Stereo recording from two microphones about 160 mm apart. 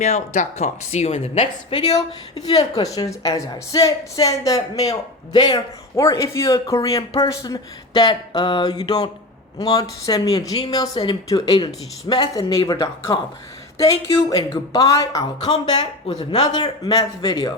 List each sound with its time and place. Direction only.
0.0 s speech: 45° left (ahead or behind)
1.9 s speech: 25° left (ahead or behind)
14.3 s speech: 20° left (ahead or behind)